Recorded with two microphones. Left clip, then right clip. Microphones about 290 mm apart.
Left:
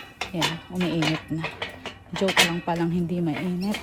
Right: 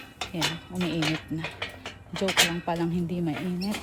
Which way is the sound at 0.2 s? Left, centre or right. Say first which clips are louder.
Left 3 dB; left.